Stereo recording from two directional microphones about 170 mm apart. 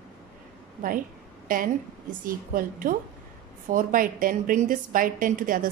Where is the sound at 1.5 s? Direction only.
55° right (ahead or behind).